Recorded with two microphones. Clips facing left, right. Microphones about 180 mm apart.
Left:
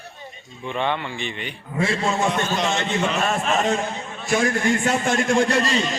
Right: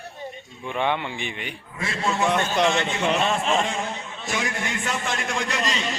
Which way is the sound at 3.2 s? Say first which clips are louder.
Left 1 dB; 25° right (ahead or behind).